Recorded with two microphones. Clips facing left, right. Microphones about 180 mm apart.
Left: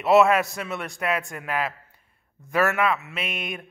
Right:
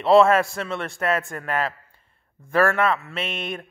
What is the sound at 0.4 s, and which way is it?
A man's voice, 20° left (ahead or behind).